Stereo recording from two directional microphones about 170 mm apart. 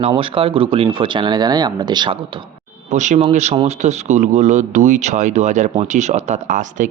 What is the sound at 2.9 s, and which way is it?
A man's voice, 45° right (ahead or behind).